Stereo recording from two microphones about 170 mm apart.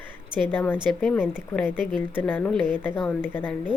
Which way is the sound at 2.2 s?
10° left (ahead or behind).